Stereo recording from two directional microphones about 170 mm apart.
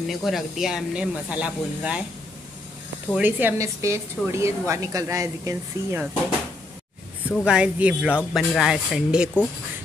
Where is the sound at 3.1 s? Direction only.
10° right (ahead or behind).